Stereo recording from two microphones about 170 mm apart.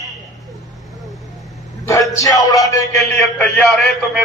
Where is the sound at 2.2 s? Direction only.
20° left (ahead or behind).